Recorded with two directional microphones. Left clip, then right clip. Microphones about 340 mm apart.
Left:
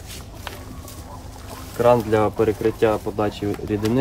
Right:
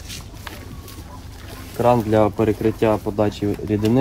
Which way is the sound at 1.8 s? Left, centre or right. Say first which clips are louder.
Even; centre.